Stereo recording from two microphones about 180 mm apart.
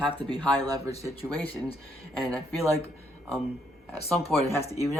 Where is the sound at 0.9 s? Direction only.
35° left (ahead or behind).